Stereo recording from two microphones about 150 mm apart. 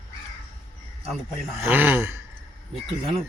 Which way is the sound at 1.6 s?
10° right (ahead or behind).